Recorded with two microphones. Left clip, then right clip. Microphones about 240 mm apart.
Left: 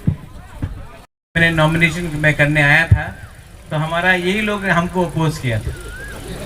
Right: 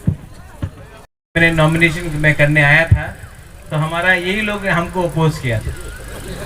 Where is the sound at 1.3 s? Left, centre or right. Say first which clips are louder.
Right 1 dB; left.